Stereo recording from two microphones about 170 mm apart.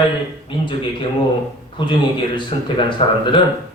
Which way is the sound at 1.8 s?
30° left (ahead or behind).